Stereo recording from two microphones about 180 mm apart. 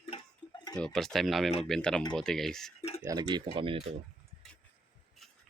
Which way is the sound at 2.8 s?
35° left (ahead or behind).